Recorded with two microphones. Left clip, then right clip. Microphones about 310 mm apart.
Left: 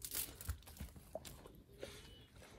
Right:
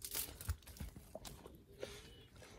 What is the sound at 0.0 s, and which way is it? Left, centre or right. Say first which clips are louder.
Crumpling: right 1 dB; centre.